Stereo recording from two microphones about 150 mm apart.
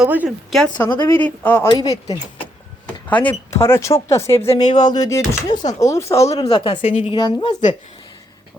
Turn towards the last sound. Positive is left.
turn(degrees=30)  # may be behind; listen again after turning